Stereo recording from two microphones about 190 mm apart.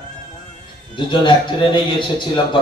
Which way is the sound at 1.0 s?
25° left (ahead or behind).